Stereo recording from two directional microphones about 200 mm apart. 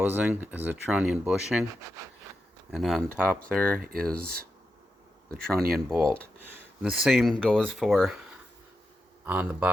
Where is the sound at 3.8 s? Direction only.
45° right (ahead or behind).